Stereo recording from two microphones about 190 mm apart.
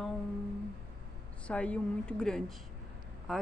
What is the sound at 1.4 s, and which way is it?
Speech, 5° left (ahead or behind).